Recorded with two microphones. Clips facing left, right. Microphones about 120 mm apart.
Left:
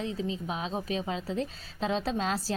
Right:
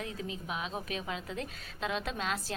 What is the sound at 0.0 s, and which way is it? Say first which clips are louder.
A woman's voice: left 6 dB; 25° left (ahead or behind).